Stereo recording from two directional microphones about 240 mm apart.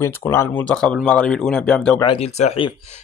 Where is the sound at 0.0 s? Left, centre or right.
Centre.